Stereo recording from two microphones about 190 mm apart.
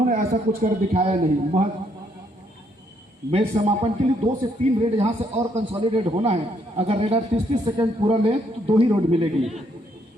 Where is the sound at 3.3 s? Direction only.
35° right (ahead or behind).